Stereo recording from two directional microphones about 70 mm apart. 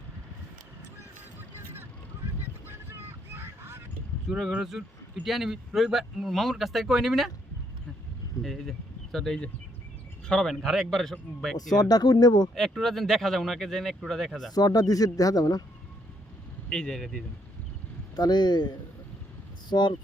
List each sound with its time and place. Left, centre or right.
2.4 s honk: right
4.3 s speech: centre
8.4 s speech: centre
11.8 s speech: left
12.8 s speech: centre
14.5 s speech: left
16.6 s speech: centre
18.2 s speech: left
19.7 s speech: left